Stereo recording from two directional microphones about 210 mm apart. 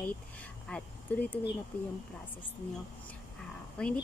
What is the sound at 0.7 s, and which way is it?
Speech, 5° left (ahead or behind).